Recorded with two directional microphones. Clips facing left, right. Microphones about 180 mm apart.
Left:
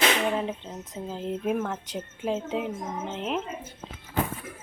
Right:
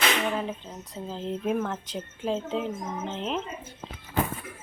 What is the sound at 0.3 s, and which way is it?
Speech, 20° left (ahead or behind).